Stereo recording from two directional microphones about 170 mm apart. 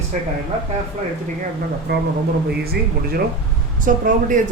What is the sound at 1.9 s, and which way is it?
Speech, 75° right (ahead or behind).